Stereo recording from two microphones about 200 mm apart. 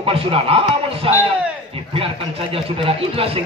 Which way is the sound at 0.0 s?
25° right (ahead or behind).